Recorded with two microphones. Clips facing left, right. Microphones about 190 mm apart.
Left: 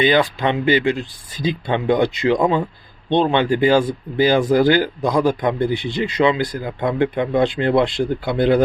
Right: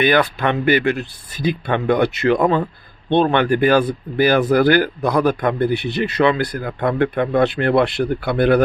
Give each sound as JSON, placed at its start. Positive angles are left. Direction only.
{"t": 0.0, "sound": "speech", "side_deg": 15}